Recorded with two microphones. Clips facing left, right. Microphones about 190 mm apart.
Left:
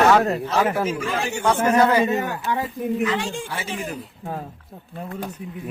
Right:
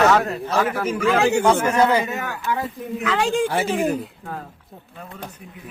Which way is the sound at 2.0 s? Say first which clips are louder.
Left 3 dB; 30° left (ahead or behind).